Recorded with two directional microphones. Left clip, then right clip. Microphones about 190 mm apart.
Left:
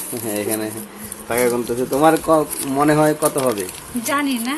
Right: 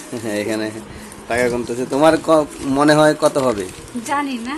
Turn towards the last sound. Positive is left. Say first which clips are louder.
# left 1 dB
turn(degrees=-5)  # may be behind; listen again after turning